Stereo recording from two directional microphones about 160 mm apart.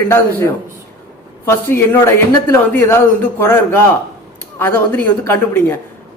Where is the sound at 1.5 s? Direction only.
15° left (ahead or behind).